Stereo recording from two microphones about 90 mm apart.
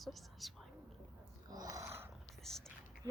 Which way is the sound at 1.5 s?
45° right (ahead or behind).